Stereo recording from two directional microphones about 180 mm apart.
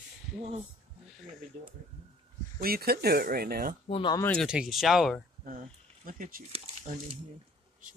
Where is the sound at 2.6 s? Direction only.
60° right (ahead or behind).